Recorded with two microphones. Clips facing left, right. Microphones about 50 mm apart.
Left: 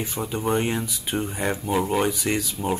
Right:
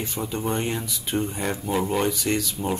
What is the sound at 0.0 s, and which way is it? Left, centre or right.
Speech, centre.